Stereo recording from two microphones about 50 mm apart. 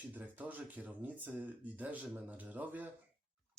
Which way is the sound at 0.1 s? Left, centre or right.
Right.